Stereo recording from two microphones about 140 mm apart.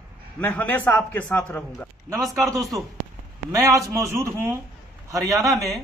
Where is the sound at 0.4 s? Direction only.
10° left (ahead or behind).